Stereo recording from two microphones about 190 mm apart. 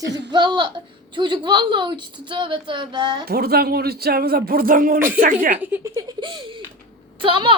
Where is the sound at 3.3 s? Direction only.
55° right (ahead or behind).